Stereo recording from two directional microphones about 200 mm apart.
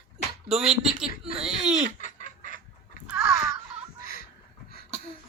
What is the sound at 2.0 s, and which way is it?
Chicken, 40° left (ahead or behind).